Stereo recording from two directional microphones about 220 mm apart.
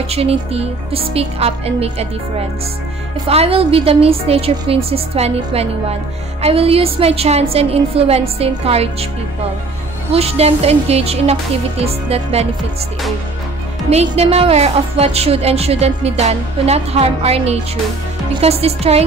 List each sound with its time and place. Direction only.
0.1 s a woman's voice: 25° right (ahead or behind)
10.1 s a woman's voice: 25° right (ahead or behind)
13.8 s a woman's voice: 30° right (ahead or behind)